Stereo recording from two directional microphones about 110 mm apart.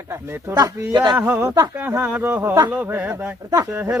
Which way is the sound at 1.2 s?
15° right (ahead or behind).